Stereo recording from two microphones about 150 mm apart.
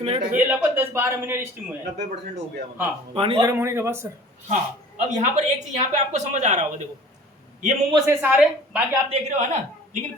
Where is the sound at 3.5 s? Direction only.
20° right (ahead or behind).